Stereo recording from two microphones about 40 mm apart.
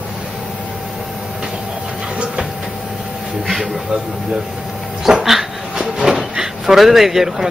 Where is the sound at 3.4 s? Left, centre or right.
Centre.